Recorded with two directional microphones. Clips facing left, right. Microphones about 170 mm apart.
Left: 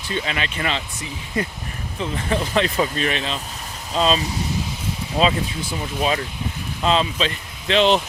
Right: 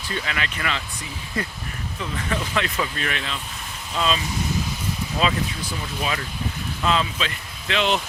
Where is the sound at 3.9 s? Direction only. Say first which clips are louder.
Left 4 dB; 35° left (ahead or behind).